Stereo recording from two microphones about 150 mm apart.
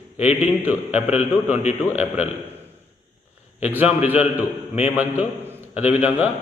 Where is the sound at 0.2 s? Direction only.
45° left (ahead or behind).